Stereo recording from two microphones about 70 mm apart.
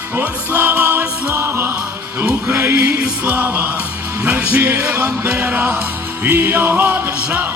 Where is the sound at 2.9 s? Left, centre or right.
Right.